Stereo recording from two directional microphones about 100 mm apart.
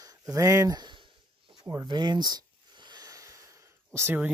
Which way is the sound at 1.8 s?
45° right (ahead or behind).